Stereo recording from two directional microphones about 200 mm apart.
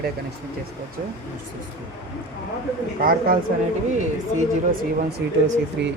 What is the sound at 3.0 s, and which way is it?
Speech, 45° right (ahead or behind).